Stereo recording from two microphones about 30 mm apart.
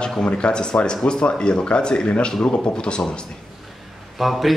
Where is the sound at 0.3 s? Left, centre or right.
Left.